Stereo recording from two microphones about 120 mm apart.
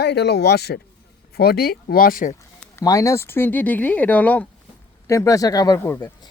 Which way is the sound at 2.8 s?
25° left (ahead or behind).